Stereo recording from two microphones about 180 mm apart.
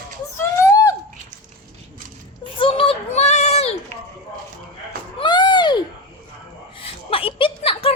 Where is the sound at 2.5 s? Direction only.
30° left (ahead or behind).